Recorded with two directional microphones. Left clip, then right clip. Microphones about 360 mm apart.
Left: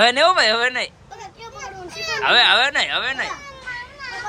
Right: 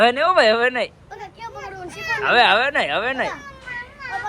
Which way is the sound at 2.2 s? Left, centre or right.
Centre.